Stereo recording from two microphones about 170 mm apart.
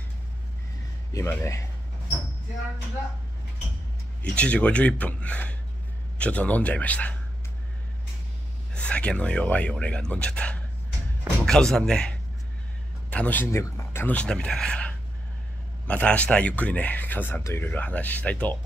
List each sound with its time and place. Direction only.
1.1 s speech: 15° left (ahead or behind)
4.2 s speech: 5° left (ahead or behind)
8.7 s speech: 5° left (ahead or behind)